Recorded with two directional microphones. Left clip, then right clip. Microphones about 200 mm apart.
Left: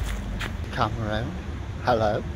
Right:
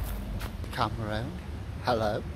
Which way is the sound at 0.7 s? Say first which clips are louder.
Left 4 dB; centre (ahead or behind).